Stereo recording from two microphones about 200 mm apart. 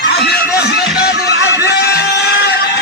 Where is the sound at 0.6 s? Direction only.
55° left (ahead or behind).